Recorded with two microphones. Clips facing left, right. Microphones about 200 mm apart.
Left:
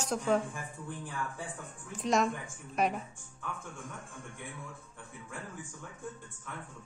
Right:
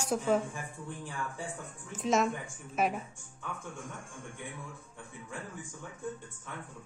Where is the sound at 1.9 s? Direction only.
Centre (ahead or behind).